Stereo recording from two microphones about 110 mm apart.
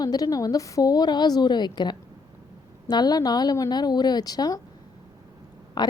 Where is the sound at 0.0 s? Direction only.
35° left (ahead or behind).